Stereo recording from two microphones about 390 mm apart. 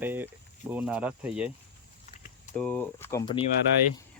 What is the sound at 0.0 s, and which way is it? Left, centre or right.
Speech, centre.